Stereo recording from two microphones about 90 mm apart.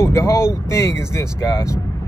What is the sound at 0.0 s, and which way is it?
Speech, 30° left (ahead or behind).